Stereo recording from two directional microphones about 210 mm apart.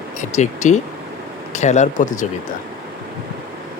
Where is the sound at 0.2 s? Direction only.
35° left (ahead or behind).